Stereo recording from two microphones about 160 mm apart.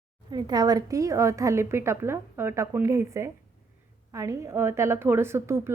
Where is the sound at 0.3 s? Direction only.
25° right (ahead or behind).